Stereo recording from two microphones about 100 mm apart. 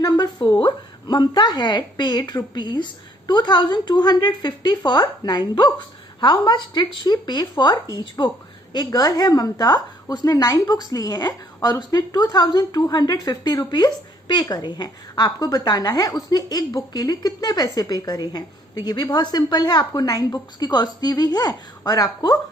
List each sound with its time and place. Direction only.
0.0 s a woman's voice: 40° left (ahead or behind)